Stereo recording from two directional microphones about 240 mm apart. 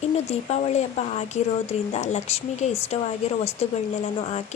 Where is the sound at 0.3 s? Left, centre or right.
Left.